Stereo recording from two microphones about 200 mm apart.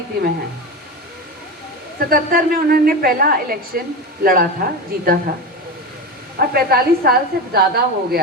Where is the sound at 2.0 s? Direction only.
45° right (ahead or behind).